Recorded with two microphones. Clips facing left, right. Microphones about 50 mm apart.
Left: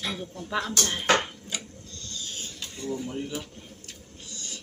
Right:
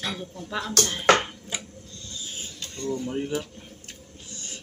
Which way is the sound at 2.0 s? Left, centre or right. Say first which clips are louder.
Even; centre.